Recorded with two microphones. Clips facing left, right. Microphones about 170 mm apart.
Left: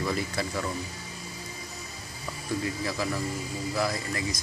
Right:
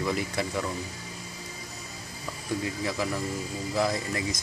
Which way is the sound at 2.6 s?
15° right (ahead or behind).